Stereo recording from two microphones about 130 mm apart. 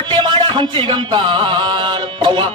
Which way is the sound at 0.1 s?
35° right (ahead or behind).